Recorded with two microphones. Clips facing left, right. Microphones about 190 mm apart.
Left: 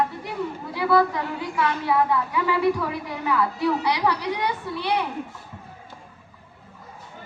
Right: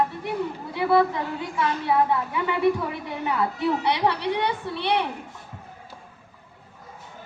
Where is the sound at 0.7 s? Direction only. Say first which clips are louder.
Even; 25° right (ahead or behind).